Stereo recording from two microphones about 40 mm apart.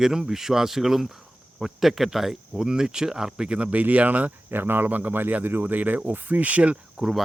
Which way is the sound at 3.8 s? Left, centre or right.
Right.